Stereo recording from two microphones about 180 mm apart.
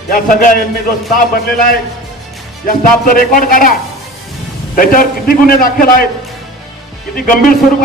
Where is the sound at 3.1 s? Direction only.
50° left (ahead or behind).